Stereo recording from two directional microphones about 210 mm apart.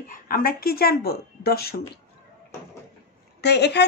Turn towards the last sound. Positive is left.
turn(degrees=55)  # may be behind; listen again after turning